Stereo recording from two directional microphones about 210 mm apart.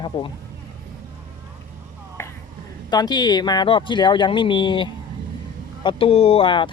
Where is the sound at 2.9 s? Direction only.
20° left (ahead or behind).